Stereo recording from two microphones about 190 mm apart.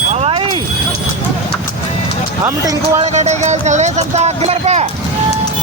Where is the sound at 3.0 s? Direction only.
35° right (ahead or behind).